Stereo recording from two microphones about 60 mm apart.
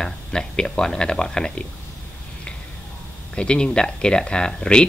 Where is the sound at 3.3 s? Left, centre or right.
Centre.